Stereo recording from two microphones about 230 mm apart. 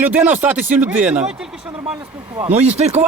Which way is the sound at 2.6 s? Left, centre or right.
Right.